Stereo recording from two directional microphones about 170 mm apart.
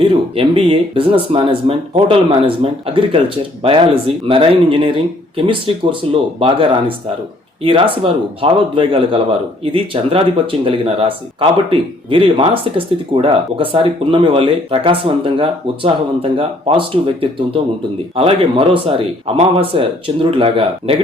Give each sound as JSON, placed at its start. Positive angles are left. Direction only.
{"t": 0.0, "sound": "speech", "side_deg": -35}